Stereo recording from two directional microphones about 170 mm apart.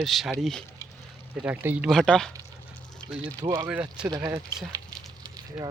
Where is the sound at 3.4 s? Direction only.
25° right (ahead or behind).